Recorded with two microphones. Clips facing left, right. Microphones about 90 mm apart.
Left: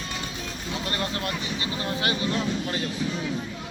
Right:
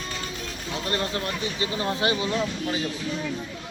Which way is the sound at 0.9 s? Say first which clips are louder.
Right 2 dB; 25° right (ahead or behind).